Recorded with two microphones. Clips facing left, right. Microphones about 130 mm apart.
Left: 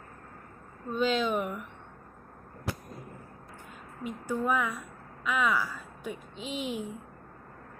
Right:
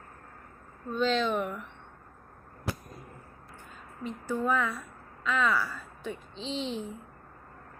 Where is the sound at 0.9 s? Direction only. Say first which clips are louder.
Even; 10° left (ahead or behind).